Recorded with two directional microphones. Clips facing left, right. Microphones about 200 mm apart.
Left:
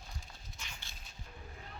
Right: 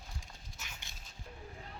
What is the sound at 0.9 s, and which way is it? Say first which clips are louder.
Music: even; 20° right (ahead or behind).